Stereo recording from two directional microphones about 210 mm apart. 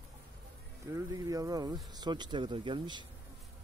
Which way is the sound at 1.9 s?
20° right (ahead or behind).